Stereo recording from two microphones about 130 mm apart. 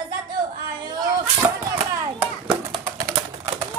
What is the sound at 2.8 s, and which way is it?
Typing, 25° right (ahead or behind).